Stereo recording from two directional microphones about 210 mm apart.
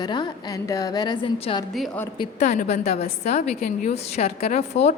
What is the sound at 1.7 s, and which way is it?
Speech, centre (ahead or behind).